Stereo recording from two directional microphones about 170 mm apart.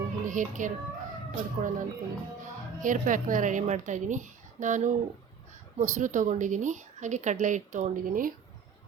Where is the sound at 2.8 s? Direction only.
50° right (ahead or behind).